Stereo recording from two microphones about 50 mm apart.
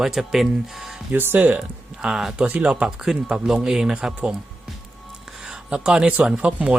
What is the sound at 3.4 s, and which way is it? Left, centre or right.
Speech, centre.